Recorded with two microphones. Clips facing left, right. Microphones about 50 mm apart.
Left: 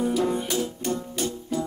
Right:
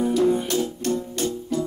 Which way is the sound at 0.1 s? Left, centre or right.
Centre.